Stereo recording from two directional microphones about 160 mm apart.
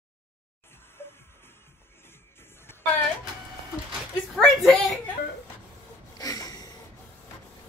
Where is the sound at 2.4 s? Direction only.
15° left (ahead or behind).